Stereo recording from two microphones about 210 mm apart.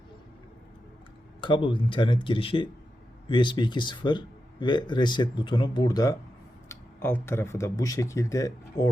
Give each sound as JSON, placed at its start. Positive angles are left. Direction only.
{"t": 1.4, "sound": "speech", "side_deg": 25}